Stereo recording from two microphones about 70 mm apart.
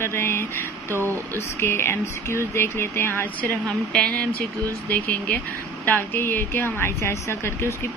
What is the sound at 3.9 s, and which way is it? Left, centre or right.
A woman's voice, centre.